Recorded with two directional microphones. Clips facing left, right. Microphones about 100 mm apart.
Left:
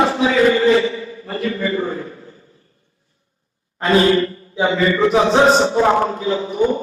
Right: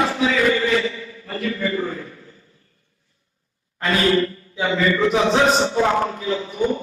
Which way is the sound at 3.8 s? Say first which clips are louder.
Left 4 dB; 30° left (ahead or behind).